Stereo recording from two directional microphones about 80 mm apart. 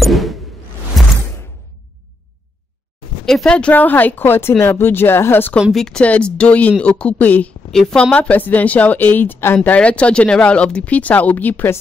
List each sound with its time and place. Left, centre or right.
0.0 s a sound: centre
1.0 s whoosh: centre
3.3 s speech: centre; by 5.5 s left
5.6 s a woman's voice: centre
6.0 s speech: centre
7.7 s speech: centre; by 11.8 s left